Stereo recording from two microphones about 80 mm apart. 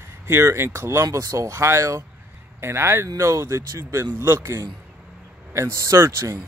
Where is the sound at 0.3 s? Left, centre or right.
Right.